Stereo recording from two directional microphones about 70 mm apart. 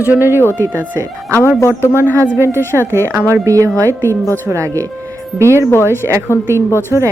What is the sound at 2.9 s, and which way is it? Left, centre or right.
Speech, right.